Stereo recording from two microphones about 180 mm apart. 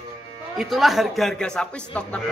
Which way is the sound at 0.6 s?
Centre (ahead or behind).